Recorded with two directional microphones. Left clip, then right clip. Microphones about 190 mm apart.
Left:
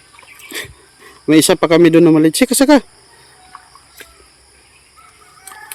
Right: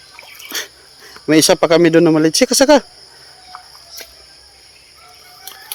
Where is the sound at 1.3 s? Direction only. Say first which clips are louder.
Even; 20° left (ahead or behind).